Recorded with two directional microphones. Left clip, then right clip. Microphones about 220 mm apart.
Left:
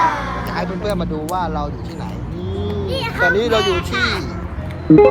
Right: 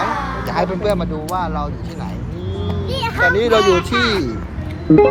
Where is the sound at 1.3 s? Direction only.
Centre (ahead or behind).